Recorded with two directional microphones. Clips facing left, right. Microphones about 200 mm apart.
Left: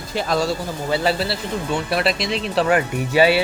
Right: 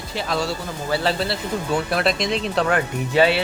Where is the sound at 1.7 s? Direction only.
5° left (ahead or behind).